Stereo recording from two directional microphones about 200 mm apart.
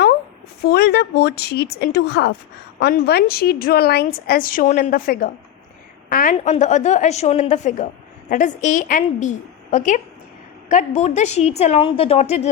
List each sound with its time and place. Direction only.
0.6 s a woman's voice: 55° left (ahead or behind); by 12.5 s 35° left (ahead or behind)